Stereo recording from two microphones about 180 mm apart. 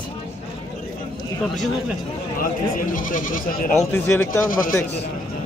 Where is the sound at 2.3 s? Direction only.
50° left (ahead or behind).